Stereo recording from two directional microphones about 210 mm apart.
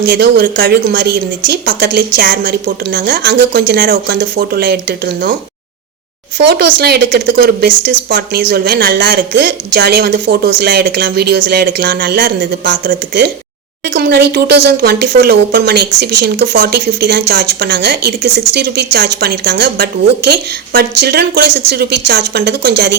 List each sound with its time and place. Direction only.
0.2 s speech: 50° right (ahead or behind)
2.3 s speech: 40° right (ahead or behind)
6.5 s speech: 50° right (ahead or behind)